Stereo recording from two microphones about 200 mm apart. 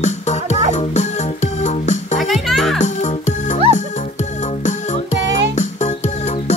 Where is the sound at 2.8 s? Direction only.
35° left (ahead or behind).